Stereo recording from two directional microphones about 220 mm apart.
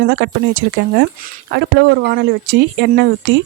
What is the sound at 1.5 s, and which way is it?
A woman's voice, 50° right (ahead or behind).